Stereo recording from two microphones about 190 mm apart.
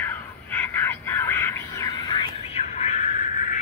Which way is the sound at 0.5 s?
10° left (ahead or behind).